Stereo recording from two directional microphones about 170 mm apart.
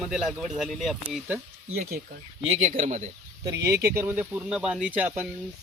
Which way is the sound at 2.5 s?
40° right (ahead or behind).